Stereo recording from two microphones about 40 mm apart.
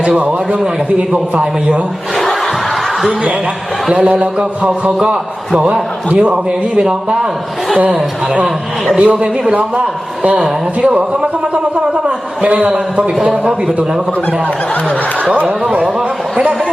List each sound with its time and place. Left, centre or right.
2.1 s a sound: centre
3.9 s a man's voice: right
9.0 s a man's voice: right
12.5 s a man's voice: right